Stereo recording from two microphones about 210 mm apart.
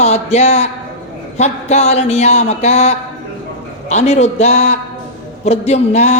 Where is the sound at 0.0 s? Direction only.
30° left (ahead or behind).